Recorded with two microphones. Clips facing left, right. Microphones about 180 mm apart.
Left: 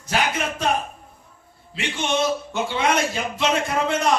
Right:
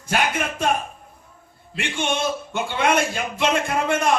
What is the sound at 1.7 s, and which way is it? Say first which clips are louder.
A man's voice: left 1 dB; 55° right (ahead or behind).